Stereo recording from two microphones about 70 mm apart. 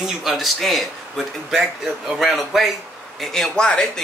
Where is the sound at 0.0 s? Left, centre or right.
Centre.